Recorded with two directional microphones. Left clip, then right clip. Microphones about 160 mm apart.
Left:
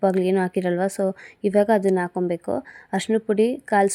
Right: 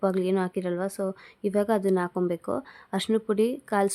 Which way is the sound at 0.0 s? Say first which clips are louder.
Left 5 dB; 15° left (ahead or behind).